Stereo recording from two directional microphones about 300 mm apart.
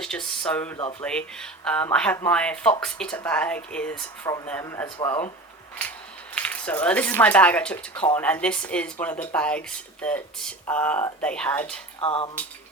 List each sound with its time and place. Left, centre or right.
0.0 s speech: centre
6.3 s speech: centre
12.0 s speech: centre